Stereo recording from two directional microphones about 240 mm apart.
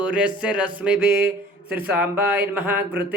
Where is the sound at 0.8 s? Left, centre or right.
Centre.